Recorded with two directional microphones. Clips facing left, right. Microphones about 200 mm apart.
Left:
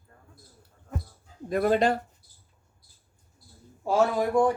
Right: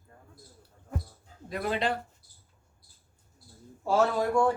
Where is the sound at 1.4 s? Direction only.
50° left (ahead or behind).